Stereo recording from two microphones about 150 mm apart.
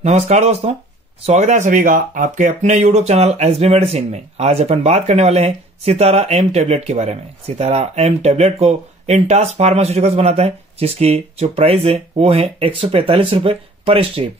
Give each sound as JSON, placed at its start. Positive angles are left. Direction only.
{"t": 0.0, "sound": "speech", "side_deg": -45}